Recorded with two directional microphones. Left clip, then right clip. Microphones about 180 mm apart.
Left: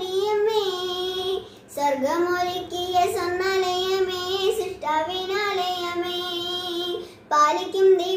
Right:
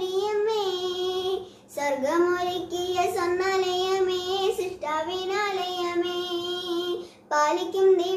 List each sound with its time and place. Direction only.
0.1 s child singing: 20° right (ahead or behind)
7.2 s child singing: 20° right (ahead or behind)